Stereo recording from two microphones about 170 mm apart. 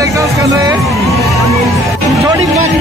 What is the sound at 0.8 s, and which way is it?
Music, centre (ahead or behind).